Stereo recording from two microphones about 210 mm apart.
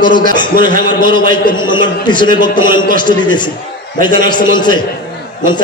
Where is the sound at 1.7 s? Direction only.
20° left (ahead or behind).